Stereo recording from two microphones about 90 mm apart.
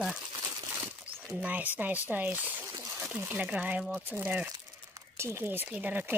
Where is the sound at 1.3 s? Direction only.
15° right (ahead or behind).